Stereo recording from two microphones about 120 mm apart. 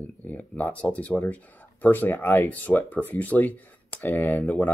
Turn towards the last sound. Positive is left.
turn(degrees=15)  # may be behind; listen again after turning